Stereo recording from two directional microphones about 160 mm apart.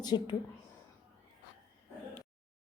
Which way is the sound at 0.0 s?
25° left (ahead or behind).